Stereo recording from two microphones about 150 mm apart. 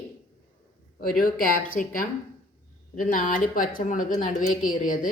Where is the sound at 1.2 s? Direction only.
70° left (ahead or behind).